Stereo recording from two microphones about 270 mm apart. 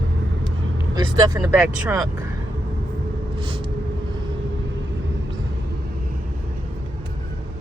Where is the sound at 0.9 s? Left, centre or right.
Centre.